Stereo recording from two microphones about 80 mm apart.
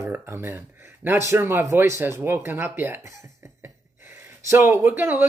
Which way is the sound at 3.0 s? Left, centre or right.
Right.